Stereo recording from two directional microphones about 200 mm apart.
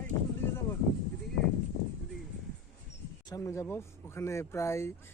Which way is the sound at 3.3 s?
15° left (ahead or behind).